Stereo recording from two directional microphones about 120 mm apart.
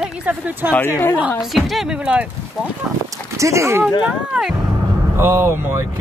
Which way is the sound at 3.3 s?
25° right (ahead or behind).